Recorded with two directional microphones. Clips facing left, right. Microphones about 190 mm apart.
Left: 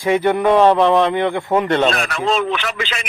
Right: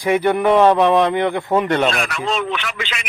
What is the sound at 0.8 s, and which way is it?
Speech, 15° right (ahead or behind).